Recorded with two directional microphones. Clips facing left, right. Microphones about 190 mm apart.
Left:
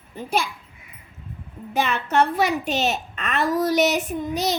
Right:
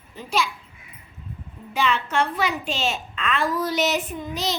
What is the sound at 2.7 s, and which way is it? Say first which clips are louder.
Speech: left 3 dB; 60° left (ahead or behind).